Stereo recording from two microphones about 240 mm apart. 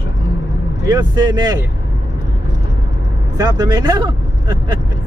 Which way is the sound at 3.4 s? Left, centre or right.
Centre.